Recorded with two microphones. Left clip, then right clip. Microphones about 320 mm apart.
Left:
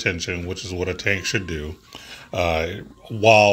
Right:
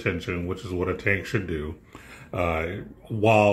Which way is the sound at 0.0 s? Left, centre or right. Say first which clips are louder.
Left 4 dB; left.